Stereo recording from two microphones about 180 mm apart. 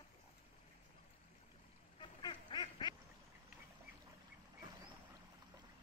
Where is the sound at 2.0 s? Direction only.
25° left (ahead or behind).